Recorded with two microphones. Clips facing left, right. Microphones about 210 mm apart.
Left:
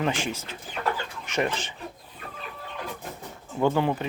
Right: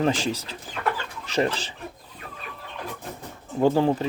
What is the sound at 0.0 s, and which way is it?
Speech, 40° right (ahead or behind).